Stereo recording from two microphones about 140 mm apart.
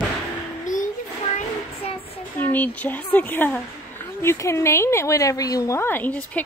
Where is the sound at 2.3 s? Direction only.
15° left (ahead or behind).